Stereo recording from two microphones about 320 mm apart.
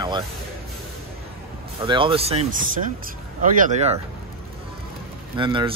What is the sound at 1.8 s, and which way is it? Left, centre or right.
Speech, centre.